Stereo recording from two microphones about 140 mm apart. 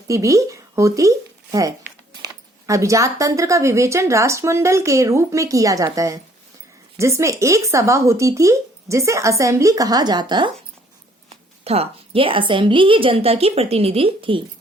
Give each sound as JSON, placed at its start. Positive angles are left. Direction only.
{"t": 0.1, "sound": "speech", "side_deg": -20}
{"t": 11.6, "sound": "a woman's voice", "side_deg": -45}